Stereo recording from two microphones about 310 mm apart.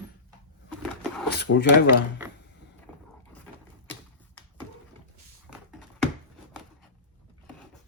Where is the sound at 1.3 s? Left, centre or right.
Left.